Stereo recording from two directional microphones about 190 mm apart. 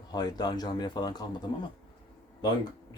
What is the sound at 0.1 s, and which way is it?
Speech, 20° left (ahead or behind).